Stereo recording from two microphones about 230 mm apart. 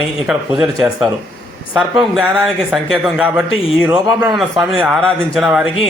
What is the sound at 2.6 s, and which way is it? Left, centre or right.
Speech, centre.